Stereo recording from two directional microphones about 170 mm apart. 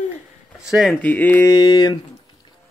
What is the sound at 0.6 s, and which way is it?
Speech, centre (ahead or behind).